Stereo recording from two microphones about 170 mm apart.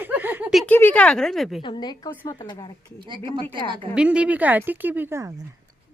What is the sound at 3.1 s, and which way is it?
Speech, 30° right (ahead or behind).